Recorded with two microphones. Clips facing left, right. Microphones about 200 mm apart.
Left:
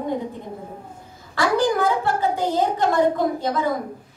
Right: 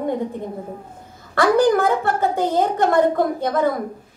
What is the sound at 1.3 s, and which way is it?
A woman's voice, 50° right (ahead or behind).